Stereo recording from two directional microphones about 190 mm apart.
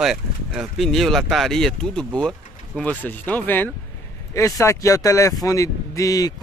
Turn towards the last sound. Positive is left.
turn(degrees=20)  # may be behind; listen again after turning